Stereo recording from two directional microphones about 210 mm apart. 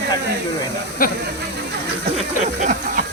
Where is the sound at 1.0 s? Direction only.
45° left (ahead or behind).